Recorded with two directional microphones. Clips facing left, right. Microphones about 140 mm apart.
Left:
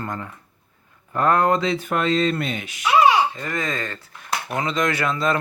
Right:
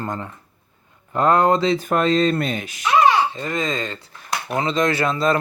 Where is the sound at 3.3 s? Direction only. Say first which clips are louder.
Right 3 dB; 20° right (ahead or behind).